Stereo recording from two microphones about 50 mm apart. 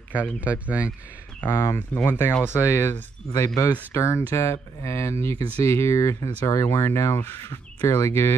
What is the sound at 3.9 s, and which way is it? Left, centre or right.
Speech, left.